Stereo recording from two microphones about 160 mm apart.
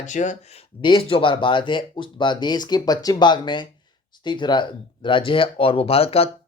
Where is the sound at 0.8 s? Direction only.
30° left (ahead or behind).